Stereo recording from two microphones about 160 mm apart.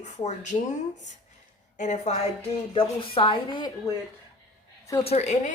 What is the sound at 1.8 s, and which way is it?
Speech, 50° left (ahead or behind).